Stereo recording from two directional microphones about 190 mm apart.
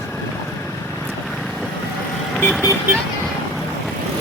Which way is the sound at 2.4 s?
10° left (ahead or behind).